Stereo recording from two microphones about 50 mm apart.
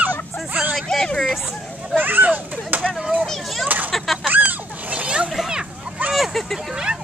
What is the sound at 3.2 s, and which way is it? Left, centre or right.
Speech, centre.